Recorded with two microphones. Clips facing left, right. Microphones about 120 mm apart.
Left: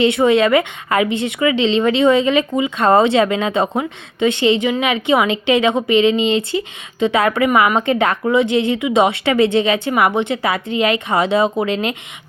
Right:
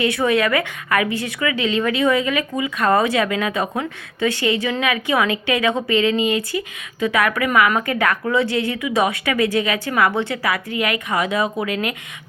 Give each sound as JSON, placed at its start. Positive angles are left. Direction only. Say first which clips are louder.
{"t": 0.0, "sound": "a woman's voice", "louder": "left 5 dB", "side_deg": 25}